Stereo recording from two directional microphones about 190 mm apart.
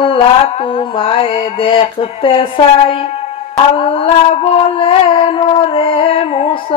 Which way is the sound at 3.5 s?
30° left (ahead or behind).